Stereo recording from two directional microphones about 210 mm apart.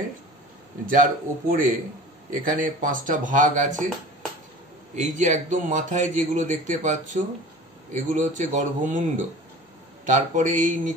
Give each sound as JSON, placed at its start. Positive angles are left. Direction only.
{"t": 0.8, "sound": "a man's voice", "side_deg": -40}
{"t": 4.9, "sound": "a man's voice", "side_deg": -35}